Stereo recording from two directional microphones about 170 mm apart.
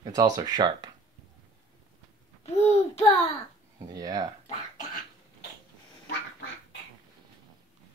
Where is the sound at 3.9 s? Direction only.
20° right (ahead or behind).